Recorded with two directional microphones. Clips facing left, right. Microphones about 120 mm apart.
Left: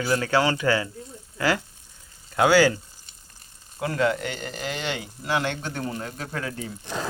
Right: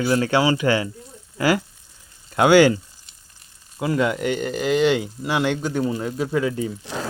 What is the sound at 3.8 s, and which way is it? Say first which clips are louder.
Speech: right 3 dB; 15° right (ahead or behind).